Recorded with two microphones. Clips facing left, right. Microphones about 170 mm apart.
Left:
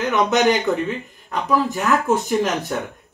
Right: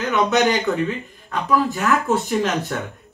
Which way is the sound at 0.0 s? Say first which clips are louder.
Left 1 dB; 20° left (ahead or behind).